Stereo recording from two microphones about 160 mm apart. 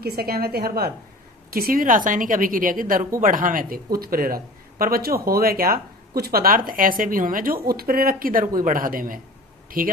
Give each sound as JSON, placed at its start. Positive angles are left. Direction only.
{"t": 0.0, "sound": "a woman's voice", "side_deg": -75}